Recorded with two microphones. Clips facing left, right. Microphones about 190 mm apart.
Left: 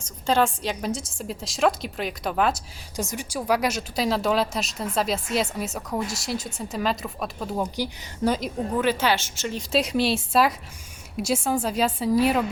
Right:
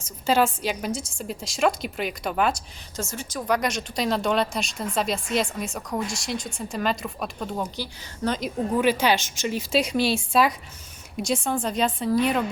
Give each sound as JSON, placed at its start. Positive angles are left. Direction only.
{"t": 0.3, "sound": "a woman's voice", "side_deg": -5}
{"t": 2.9, "sound": "a woman's voice", "side_deg": 15}
{"t": 8.8, "sound": "a woman's voice", "side_deg": -15}
{"t": 9.6, "sound": "a woman's voice", "side_deg": 0}